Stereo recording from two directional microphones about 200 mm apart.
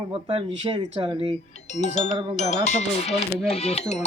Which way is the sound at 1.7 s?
35° left (ahead or behind).